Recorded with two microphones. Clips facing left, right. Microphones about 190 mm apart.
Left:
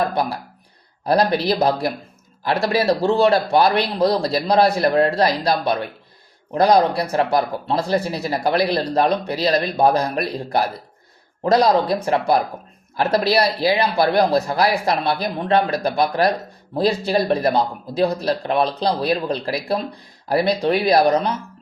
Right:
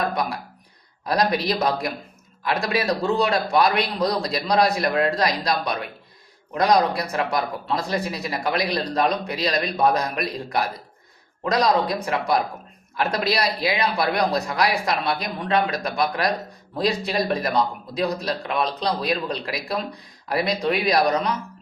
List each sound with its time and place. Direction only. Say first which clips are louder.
1.0 s speech: left 4 dB; 30° left (ahead or behind)